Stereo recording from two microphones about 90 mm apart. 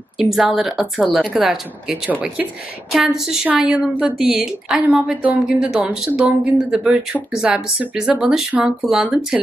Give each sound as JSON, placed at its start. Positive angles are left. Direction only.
{"t": 0.2, "sound": "speech", "side_deg": -5}